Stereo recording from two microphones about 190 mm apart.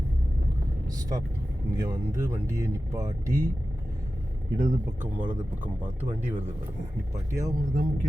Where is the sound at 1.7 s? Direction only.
15° right (ahead or behind).